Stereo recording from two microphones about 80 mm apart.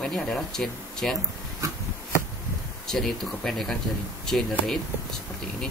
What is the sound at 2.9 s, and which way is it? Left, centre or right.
Speech, centre.